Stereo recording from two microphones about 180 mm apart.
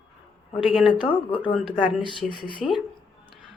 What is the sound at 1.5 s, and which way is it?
Speech, centre (ahead or behind).